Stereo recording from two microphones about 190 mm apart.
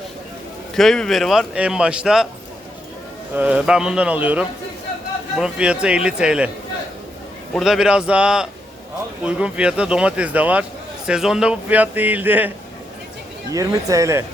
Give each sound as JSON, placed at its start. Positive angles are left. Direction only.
{"t": 0.8, "sound": "speech", "side_deg": 0}
{"t": 3.3, "sound": "a man's voice", "side_deg": -5}
{"t": 7.5, "sound": "a man's voice", "side_deg": 0}
{"t": 13.5, "sound": "a man's voice", "side_deg": -15}